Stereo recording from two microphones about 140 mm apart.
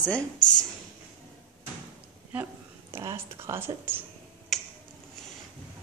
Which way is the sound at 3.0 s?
20° right (ahead or behind).